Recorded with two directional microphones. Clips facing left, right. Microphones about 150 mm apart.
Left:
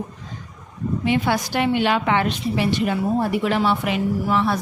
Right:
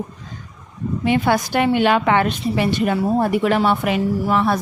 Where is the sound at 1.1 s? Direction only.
50° right (ahead or behind).